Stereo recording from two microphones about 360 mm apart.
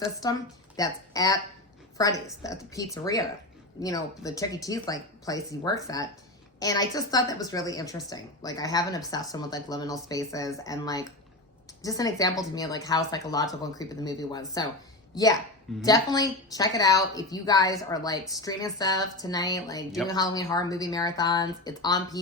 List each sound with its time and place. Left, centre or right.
0.2 s speech: centre